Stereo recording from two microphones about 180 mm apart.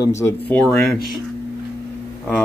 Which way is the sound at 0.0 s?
15° left (ahead or behind).